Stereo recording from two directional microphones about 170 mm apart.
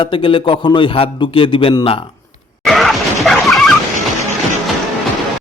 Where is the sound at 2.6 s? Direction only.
Centre (ahead or behind).